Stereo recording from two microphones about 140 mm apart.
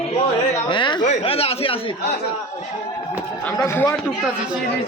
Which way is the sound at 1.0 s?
45° left (ahead or behind).